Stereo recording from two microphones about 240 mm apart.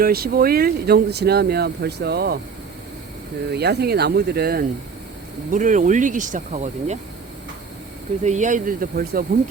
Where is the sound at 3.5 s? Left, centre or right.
Right.